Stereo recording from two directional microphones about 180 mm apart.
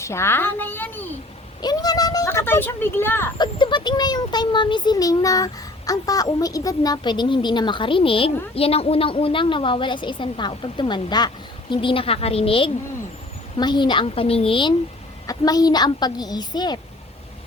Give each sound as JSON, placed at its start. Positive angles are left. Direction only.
{"t": 0.0, "sound": "a woman's voice", "side_deg": 15}
{"t": 1.6, "sound": "speech", "side_deg": 20}
{"t": 3.3, "sound": "a child's voice", "side_deg": 25}